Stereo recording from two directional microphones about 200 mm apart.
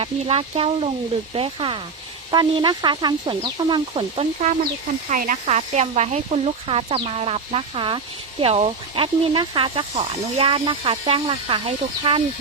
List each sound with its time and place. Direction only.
0.0 s speech: 30° right (ahead or behind)
5.0 s speech: 40° right (ahead or behind)